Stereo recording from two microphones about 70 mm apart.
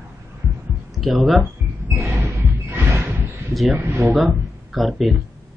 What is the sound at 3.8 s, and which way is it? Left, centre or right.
Speech, right.